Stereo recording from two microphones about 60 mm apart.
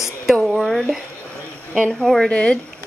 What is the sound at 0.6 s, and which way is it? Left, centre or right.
Speech, centre.